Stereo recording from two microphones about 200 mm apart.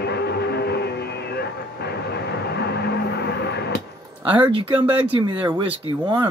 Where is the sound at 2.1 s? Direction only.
55° left (ahead or behind).